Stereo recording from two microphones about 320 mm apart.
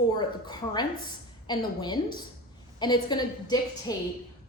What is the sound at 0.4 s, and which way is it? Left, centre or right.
A woman's voice, centre.